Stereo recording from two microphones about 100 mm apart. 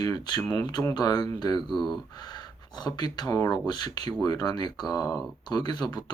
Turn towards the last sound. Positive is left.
turn(degrees=45)  # may be behind; listen again after turning